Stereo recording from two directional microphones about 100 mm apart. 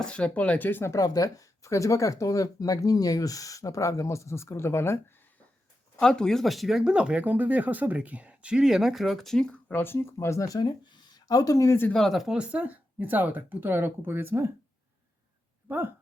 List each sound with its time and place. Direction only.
0.0 s speech: 10° left (ahead or behind)
0.9 s speech: 40° left (ahead or behind)
6.0 s speech: 5° left (ahead or behind); by 10.6 s 30° left (ahead or behind)
10.6 s speech: 50° left (ahead or behind); by 11.9 s 30° left (ahead or behind)
11.9 s speech: 5° left (ahead or behind); by 14.5 s 25° right (ahead or behind)
15.7 s speech: 20° right (ahead or behind)